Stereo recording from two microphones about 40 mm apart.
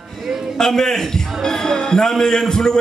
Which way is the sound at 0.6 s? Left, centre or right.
Centre.